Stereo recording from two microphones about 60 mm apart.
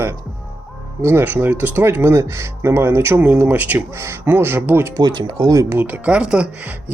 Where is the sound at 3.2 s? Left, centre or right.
Right.